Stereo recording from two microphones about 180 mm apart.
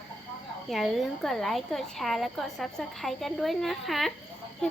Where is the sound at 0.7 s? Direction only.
Centre (ahead or behind).